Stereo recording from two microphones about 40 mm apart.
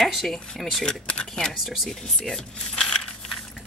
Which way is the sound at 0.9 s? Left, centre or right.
Left.